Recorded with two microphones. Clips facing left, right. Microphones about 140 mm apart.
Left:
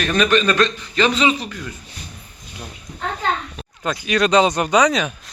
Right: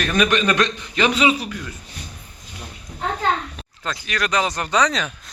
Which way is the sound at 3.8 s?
15° left (ahead or behind).